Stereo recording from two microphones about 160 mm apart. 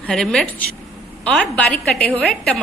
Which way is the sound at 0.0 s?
5° left (ahead or behind).